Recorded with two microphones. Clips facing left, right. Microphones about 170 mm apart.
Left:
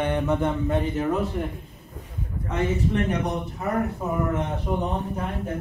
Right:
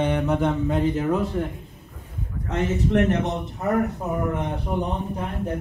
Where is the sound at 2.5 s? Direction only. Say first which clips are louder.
Right 2 dB; 75° right (ahead or behind).